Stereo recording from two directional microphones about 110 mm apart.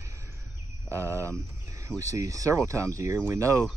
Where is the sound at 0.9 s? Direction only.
25° right (ahead or behind).